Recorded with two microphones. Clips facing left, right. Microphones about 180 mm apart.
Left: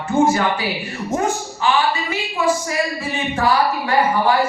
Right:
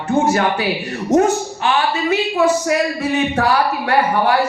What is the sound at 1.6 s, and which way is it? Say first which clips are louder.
A woman's voice: even; 70° right (ahead or behind).